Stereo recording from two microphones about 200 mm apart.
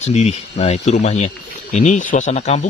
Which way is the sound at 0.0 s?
35° left (ahead or behind).